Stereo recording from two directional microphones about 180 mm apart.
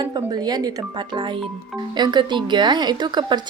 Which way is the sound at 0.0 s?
20° right (ahead or behind).